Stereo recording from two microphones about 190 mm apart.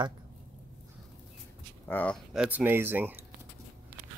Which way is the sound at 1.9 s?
10° left (ahead or behind).